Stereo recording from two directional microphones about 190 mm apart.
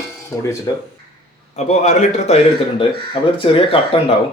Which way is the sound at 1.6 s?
35° left (ahead or behind).